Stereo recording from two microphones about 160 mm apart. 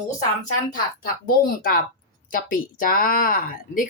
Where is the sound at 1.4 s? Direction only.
60° left (ahead or behind).